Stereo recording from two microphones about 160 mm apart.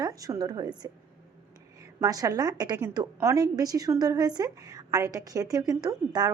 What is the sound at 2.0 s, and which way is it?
A woman's voice, 20° right (ahead or behind).